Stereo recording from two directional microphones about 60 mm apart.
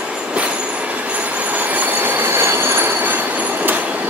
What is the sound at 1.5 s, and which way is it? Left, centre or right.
Train, right.